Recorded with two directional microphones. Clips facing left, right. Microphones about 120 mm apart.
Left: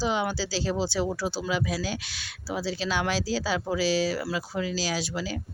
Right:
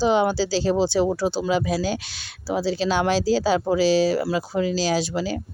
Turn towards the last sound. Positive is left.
turn(degrees=-30)  # may be behind; listen again after turning